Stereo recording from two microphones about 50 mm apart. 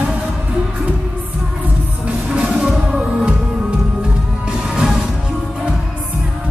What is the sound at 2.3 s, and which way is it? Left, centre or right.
Music, right.